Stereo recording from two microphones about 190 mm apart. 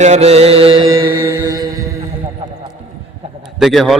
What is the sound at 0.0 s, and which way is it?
Music, 35° right (ahead or behind).